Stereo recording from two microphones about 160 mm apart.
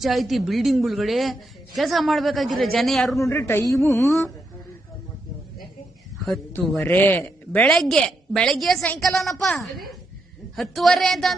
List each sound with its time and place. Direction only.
0.0 s a woman's voice: centre (ahead or behind)
3.2 s a man's voice: 15° left (ahead or behind)
6.8 s a woman's voice: 10° left (ahead or behind)